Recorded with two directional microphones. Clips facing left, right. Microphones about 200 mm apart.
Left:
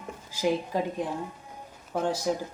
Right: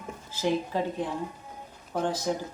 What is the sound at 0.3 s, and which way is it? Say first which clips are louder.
Speech: left 1 dB; 15° left (ahead or behind).